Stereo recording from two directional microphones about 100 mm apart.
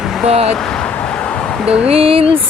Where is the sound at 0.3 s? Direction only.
90° right.